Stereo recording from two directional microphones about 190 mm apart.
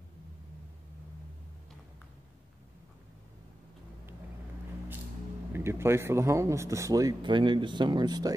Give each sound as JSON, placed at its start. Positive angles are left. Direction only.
{"t": 5.5, "sound": "speech", "side_deg": -15}